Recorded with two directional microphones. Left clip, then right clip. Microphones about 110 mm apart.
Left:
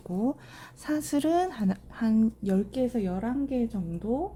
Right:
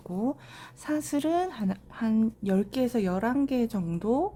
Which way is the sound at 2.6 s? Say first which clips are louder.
Even; 35° right (ahead or behind).